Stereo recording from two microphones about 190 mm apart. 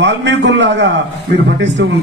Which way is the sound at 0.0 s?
70° right (ahead or behind).